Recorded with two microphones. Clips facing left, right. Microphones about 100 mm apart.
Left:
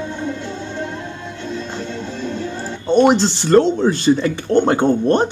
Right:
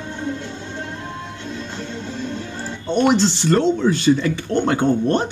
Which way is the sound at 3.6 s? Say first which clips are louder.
Left 7 dB; 40° left (ahead or behind).